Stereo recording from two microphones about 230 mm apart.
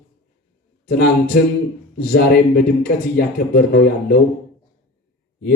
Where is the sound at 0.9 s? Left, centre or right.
Left.